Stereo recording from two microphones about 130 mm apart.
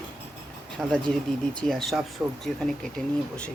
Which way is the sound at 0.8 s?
5° left (ahead or behind).